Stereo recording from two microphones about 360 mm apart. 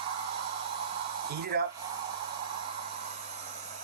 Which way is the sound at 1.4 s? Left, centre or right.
Right.